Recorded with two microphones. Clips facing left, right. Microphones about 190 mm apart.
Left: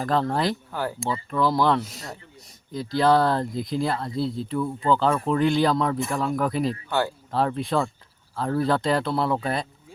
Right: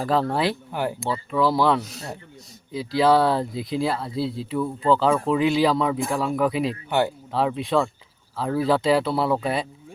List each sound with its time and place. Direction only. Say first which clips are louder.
0.0 s speech: right 1 dB; 5° right (ahead or behind)
0.7 s speech: right 3 dB; 20° right (ahead or behind)
1.3 s speech: right 1 dB; 5° right (ahead or behind)